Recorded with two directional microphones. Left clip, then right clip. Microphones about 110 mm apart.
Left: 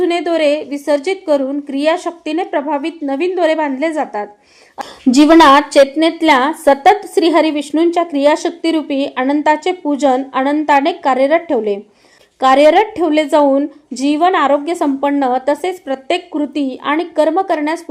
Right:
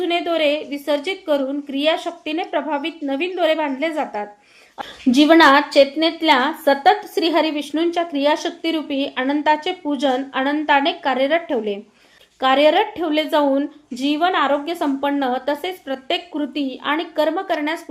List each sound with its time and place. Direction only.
0.0 s a woman's voice: 40° left (ahead or behind)